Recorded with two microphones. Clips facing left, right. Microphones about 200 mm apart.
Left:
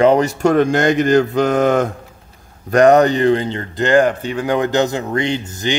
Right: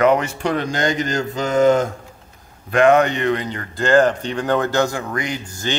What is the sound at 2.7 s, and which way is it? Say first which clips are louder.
A man's voice: left 4 dB; 40° left (ahead or behind).